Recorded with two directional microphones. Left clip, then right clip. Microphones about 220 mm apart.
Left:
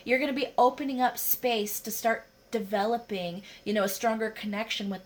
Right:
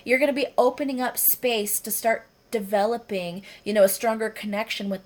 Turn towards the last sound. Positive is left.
turn(degrees=-40)  # may be behind; listen again after turning